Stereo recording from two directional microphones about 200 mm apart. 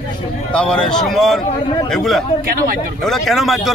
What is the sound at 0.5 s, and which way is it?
A man's voice, 5° left (ahead or behind).